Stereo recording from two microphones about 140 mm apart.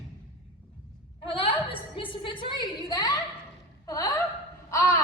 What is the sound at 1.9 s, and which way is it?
A woman's voice, 40° left (ahead or behind).